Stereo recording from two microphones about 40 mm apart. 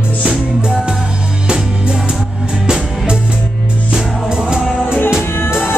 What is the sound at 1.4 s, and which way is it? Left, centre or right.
Music, centre.